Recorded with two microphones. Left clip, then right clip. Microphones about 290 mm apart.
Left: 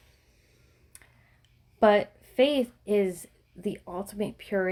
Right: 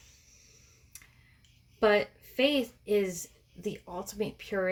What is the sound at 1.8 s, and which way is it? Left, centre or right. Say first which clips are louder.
A woman's voice: left 4 dB; left.